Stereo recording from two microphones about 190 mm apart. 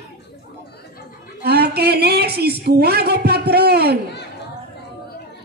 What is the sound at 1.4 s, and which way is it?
A woman's voice, 55° right (ahead or behind).